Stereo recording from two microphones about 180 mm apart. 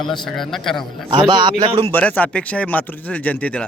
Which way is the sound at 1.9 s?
10° left (ahead or behind).